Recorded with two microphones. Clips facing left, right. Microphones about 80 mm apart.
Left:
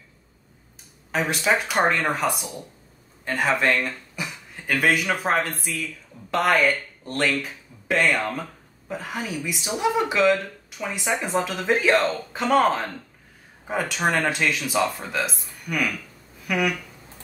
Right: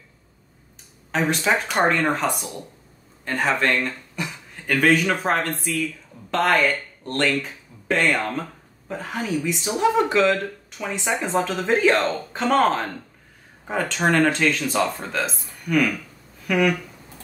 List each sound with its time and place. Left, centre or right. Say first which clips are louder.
1.1 s a woman's voice: right 1 dB; centre